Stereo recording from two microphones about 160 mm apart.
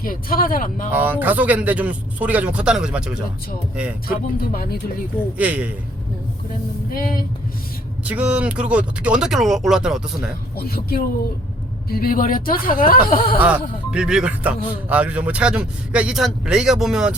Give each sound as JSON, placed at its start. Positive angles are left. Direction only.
{"t": 0.0, "sound": "speech", "side_deg": 60}
{"t": 0.9, "sound": "a man's voice", "side_deg": -10}
{"t": 4.4, "sound": "speech", "side_deg": 70}
{"t": 5.4, "sound": "a man's voice", "side_deg": -10}
{"t": 6.9, "sound": "speech", "side_deg": 65}
{"t": 8.0, "sound": "a man's voice", "side_deg": -10}
{"t": 10.6, "sound": "speech", "side_deg": 70}
{"t": 13.4, "sound": "a man's voice", "side_deg": -5}